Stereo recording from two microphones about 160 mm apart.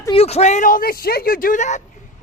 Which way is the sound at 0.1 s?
40° left (ahead or behind).